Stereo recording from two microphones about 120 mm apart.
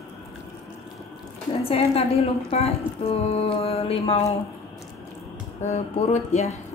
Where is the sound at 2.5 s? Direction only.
55° left (ahead or behind).